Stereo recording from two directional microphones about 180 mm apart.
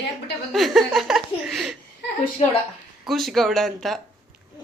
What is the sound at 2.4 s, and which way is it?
Speech, 35° left (ahead or behind).